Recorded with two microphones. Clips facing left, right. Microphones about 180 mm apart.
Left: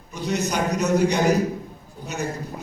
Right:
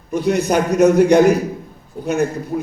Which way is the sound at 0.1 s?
55° right (ahead or behind).